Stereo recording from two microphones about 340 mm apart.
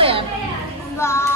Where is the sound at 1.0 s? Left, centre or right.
Centre.